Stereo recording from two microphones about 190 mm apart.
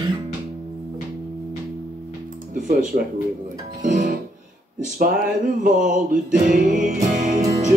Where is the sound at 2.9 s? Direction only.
45° right (ahead or behind).